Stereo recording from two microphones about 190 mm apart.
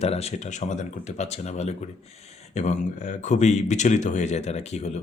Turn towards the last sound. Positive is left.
turn(degrees=35)  # may be behind; listen again after turning